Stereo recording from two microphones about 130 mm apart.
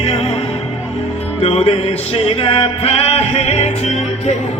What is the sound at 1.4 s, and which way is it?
Music, 50° left (ahead or behind).